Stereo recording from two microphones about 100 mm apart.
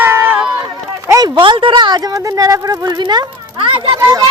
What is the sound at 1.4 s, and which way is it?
Speech, 60° right (ahead or behind).